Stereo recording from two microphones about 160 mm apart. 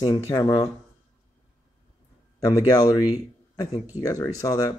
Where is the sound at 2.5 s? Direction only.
20° left (ahead or behind).